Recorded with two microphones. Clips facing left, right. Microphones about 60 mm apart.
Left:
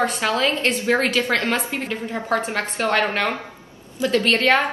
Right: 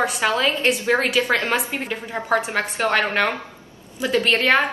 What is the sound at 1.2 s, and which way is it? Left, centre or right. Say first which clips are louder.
A woman's voice: right 1 dB; centre.